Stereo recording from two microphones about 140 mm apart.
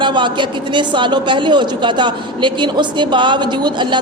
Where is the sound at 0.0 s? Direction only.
35° right (ahead or behind).